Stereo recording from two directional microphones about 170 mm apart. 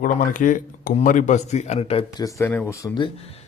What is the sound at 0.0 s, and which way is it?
Speech, 50° left (ahead or behind).